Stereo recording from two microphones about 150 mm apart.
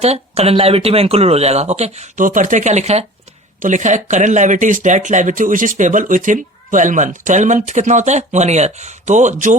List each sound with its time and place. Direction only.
0.0 s speech: 45° right (ahead or behind)
3.6 s speech: 55° right (ahead or behind)